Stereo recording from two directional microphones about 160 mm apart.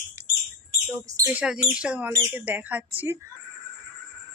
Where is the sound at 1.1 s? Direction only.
20° right (ahead or behind).